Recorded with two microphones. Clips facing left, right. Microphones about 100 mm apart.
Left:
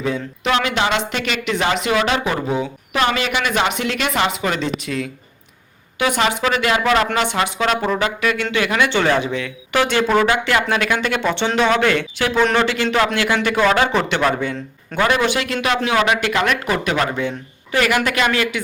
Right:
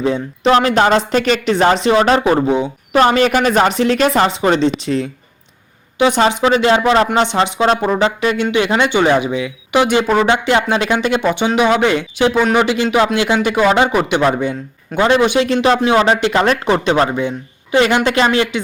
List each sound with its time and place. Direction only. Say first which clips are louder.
0.0 s speech: right 6 dB; 30° right (ahead or behind)
2.9 s speech: right 8 dB; 40° right (ahead or behind)
6.0 s speech: right 6 dB; 30° right (ahead or behind)
17.1 s speech: right 4 dB; 20° right (ahead or behind)